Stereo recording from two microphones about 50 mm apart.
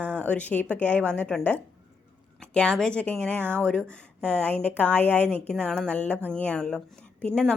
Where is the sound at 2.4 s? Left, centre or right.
Centre.